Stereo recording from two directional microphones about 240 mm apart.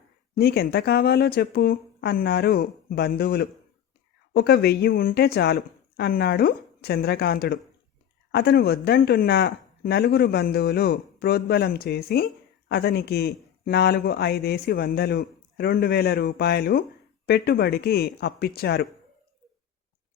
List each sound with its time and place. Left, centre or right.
0.3 s speech: left